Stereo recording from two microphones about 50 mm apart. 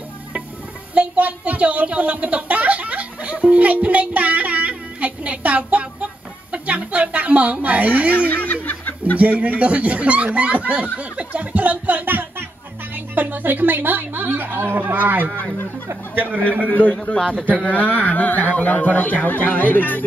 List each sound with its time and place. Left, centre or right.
0.9 s a sound: right
8.3 s snicker: left
9.2 s a woman's voice: right
16.6 s a man's voice: left